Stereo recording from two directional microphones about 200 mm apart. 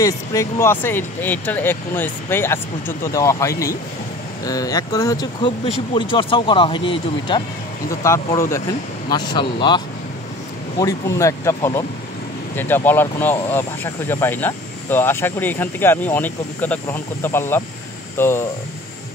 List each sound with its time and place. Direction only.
0.0 s speech: 15° left (ahead or behind)
10.8 s speech: 15° left (ahead or behind)